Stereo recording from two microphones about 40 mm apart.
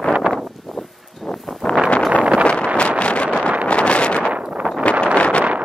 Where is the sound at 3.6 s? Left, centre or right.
Left.